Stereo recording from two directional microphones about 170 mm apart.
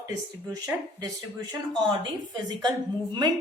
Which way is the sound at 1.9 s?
25° right (ahead or behind).